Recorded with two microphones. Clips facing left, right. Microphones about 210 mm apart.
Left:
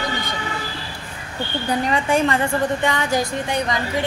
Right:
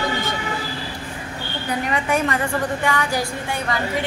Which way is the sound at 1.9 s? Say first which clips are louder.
Left 2 dB; 30° left (ahead or behind).